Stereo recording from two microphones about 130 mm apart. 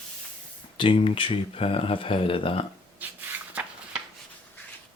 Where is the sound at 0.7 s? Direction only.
40° left (ahead or behind).